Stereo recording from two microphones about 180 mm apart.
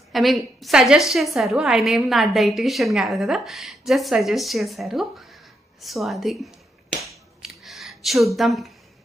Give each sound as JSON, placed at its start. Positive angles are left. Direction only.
{"t": 0.1, "sound": "a woman's voice", "side_deg": 0}
{"t": 7.0, "sound": "finger snapping", "side_deg": 0}